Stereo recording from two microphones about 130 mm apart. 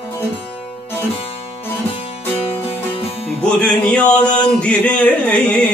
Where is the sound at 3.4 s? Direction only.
10° left (ahead or behind).